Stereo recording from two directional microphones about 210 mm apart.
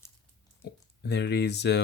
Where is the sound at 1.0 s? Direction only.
55° left (ahead or behind).